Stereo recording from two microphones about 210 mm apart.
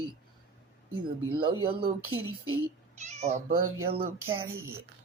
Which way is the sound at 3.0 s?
30° right (ahead or behind).